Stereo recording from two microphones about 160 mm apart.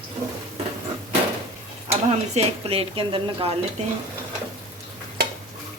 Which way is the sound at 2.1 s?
40° right (ahead or behind).